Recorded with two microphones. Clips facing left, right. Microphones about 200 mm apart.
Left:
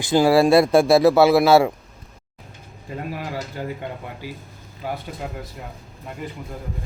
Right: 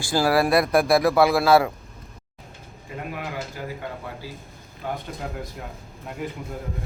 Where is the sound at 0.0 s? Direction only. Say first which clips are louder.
Left 5 dB; 20° left (ahead or behind).